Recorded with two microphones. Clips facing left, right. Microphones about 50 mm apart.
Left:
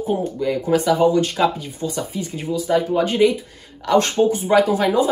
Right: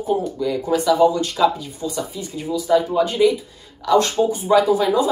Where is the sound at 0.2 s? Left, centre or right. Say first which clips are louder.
Left 1 dB; left.